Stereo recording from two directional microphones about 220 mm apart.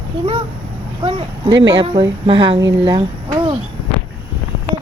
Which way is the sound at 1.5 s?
55° right (ahead or behind).